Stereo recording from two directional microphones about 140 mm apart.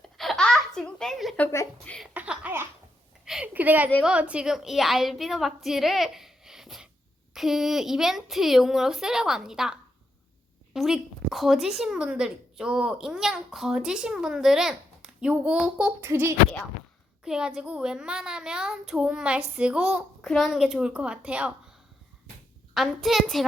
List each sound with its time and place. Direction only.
0.2 s baby laughter: 5° left (ahead or behind)
1.4 s speech: 20° left (ahead or behind)
2.0 s a sound: 5° right (ahead or behind)
4.0 s a woman's voice: 10° right (ahead or behind)
10.8 s a woman's voice: centre (ahead or behind)
16.0 s speech: 15° right (ahead or behind)
17.2 s a woman's voice: 5° right (ahead or behind)
22.7 s a woman's voice: centre (ahead or behind)